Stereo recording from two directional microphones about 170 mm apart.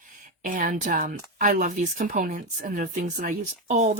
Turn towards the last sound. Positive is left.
turn(degrees=-45)  # may be behind; listen again after turning